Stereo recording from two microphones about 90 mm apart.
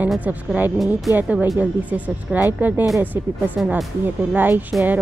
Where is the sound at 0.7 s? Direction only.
Centre (ahead or behind).